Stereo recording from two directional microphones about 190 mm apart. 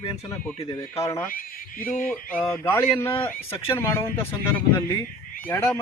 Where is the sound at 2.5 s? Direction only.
15° left (ahead or behind).